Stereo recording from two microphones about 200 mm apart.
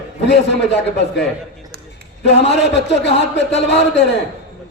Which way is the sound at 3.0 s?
60° left (ahead or behind).